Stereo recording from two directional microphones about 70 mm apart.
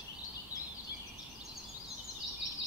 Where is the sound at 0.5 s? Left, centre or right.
Left.